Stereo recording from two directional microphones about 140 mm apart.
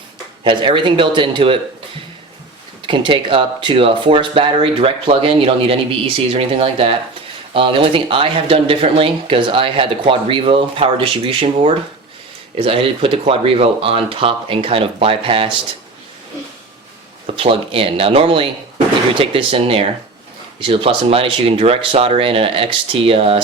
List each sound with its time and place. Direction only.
0.4 s speech: 35° right (ahead or behind)
2.8 s speech: 35° right (ahead or behind)
12.5 s speech: 40° right (ahead or behind)
17.3 s speech: 40° right (ahead or behind)